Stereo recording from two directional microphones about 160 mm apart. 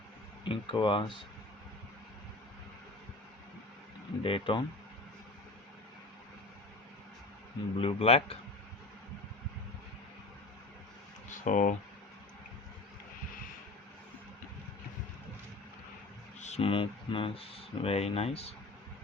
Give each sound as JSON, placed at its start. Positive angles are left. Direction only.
{"t": 0.4, "sound": "speech", "side_deg": 30}
{"t": 4.2, "sound": "speech", "side_deg": 35}
{"t": 7.8, "sound": "speech", "side_deg": 35}
{"t": 11.3, "sound": "speech", "side_deg": 55}
{"t": 16.4, "sound": "speech", "side_deg": 40}